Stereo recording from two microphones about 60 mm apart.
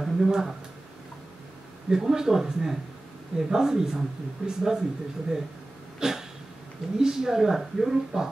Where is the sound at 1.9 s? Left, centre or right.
Centre.